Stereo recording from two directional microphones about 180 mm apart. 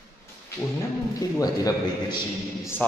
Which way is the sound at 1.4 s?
20° left (ahead or behind).